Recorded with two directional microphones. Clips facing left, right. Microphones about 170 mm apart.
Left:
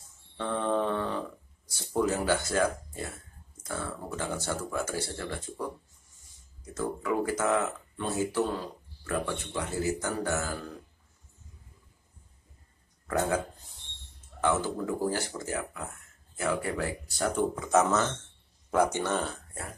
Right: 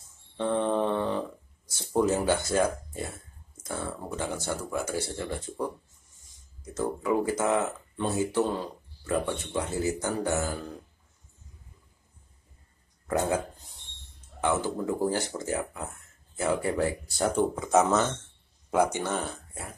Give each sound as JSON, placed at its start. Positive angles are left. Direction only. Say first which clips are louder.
{"t": 0.4, "sound": "a sound", "louder": "right 3 dB", "side_deg": -20}
{"t": 1.7, "sound": "speech", "louder": "right 3 dB", "side_deg": -20}
{"t": 6.6, "sound": "speech", "louder": "right 3 dB", "side_deg": -20}
{"t": 13.0, "sound": "speech", "louder": "right 1 dB", "side_deg": -20}
{"t": 14.4, "sound": "speech", "louder": "right 1 dB", "side_deg": -20}